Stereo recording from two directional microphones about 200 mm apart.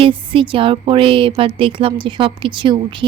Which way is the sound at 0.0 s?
25° right (ahead or behind).